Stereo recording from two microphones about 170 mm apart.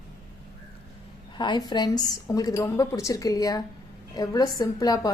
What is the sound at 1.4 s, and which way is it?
A woman's voice, 25° left (ahead or behind).